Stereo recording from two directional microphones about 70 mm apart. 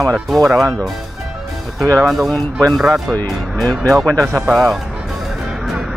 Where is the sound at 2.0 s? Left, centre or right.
Centre.